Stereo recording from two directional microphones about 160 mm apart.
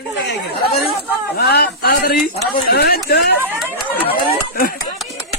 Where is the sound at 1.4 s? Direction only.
85° left; by 2.2 s 65° left (ahead or behind).